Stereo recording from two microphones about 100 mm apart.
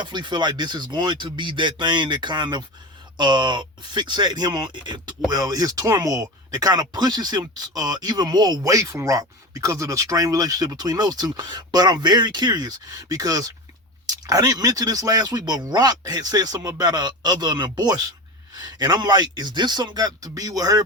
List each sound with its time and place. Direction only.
0.0 s speech: 50° right (ahead or behind)
5.3 s speech: 40° right (ahead or behind)